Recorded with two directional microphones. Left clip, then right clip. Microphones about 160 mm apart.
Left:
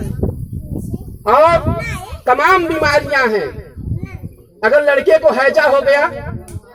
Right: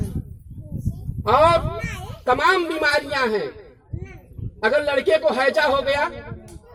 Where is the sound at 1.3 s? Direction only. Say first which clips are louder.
Left 6 dB; 30° right (ahead or behind).